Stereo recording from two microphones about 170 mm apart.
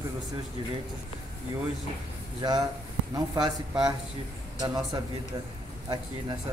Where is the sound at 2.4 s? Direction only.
25° right (ahead or behind).